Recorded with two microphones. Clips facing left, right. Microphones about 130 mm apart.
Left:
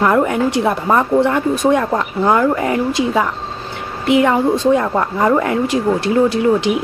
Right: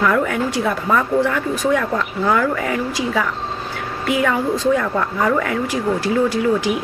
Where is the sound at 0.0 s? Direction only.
30° left (ahead or behind).